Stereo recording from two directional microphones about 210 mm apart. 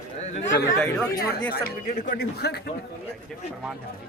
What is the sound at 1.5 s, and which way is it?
Speech, 40° left (ahead or behind).